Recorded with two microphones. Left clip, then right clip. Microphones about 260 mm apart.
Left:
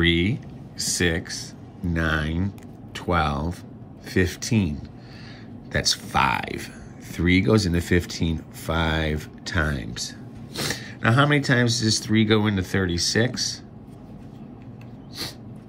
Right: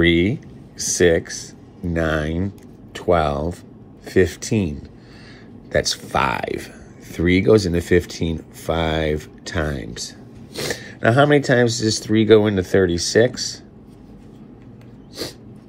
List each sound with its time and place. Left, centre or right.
0.0 s speech: centre